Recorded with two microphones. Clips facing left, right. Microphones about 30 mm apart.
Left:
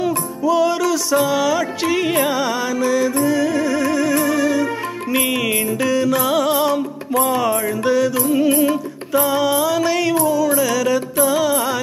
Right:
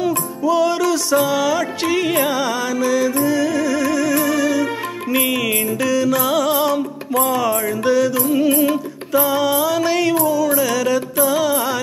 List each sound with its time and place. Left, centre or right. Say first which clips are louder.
0.0 s music: even; centre
6.0 s music: even; centre
7.2 s music: even; centre
7.8 s music: right 1 dB; centre